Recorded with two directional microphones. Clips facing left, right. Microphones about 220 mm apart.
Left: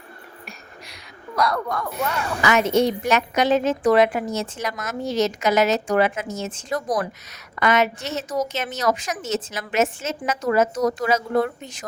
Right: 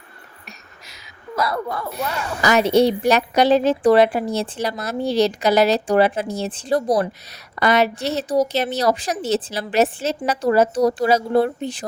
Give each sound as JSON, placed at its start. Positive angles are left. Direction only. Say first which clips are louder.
{"t": 1.4, "sound": "speech", "louder": "even", "side_deg": -5}
{"t": 2.0, "sound": "a woman's voice", "louder": "even", "side_deg": -35}